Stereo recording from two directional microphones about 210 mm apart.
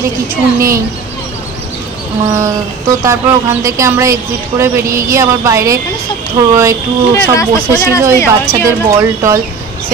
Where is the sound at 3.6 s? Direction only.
15° right (ahead or behind).